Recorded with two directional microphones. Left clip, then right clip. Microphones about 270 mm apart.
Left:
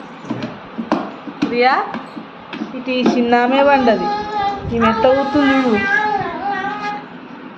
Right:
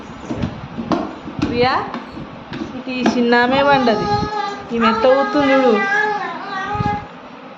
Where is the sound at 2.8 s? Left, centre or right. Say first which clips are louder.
Left 3 dB; centre.